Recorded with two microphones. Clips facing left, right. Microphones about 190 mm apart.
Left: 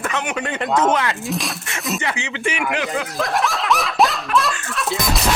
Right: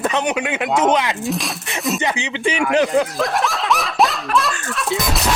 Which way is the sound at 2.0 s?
20° right (ahead or behind).